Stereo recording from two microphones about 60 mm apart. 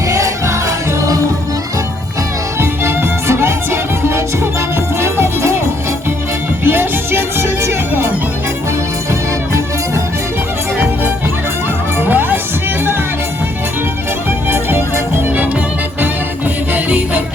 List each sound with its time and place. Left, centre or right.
0.1 s music: right
2.6 s music: right
6.7 s music: right
11.9 s music: right
14.3 s music: right
16.7 s music: right